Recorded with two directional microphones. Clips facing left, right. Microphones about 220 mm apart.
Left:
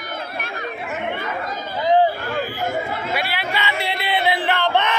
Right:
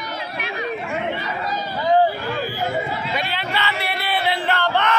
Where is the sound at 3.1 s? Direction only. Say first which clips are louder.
Even; 10° left (ahead or behind).